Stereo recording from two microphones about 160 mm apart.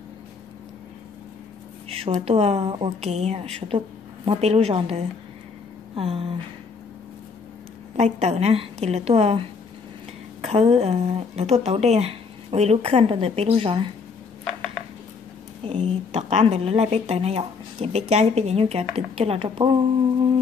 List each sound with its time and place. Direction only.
1.9 s speech: 40° right (ahead or behind)
7.9 s speech: 45° right (ahead or behind)
15.6 s speech: 40° right (ahead or behind)